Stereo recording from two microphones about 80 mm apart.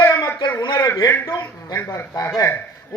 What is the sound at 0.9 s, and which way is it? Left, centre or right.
Speech, left.